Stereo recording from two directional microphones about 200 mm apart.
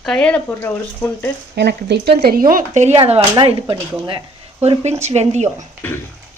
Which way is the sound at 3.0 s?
25° right (ahead or behind).